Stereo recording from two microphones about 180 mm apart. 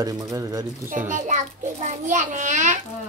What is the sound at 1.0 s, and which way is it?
A child's voice, 45° right (ahead or behind).